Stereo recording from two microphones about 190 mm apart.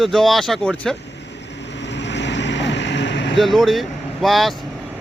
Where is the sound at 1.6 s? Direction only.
65° left (ahead or behind).